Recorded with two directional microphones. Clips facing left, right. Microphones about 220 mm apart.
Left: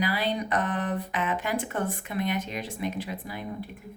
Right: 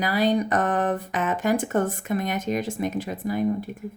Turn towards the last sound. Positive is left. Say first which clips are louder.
# right 11 dB
turn(degrees=-45)  # may be behind; listen again after turning